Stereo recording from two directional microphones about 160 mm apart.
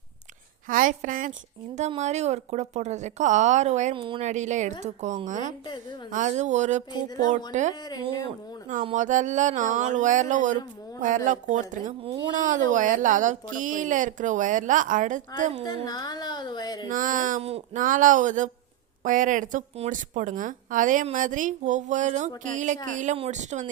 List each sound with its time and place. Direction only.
0.7 s a woman's voice: 55° right (ahead or behind)
3.9 s speech: 30° right (ahead or behind)
4.2 s speech: 45° right (ahead or behind)
6.9 s a woman's voice: 25° left (ahead or behind)
8.8 s speech: 45° right (ahead or behind)
15.6 s a woman's voice: 25° left (ahead or behind)
16.9 s a woman's voice: 55° right (ahead or behind)
17.4 s speech: 40° right (ahead or behind)
17.8 s speech: 55° right (ahead or behind)